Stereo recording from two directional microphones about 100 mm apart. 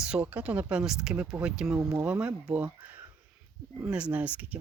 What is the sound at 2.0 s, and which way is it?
Speech, 15° right (ahead or behind).